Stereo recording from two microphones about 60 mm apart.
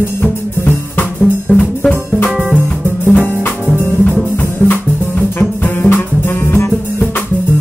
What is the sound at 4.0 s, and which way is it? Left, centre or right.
Music, left.